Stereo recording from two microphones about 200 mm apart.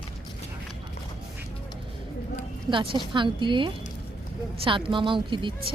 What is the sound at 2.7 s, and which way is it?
Speech, 25° right (ahead or behind).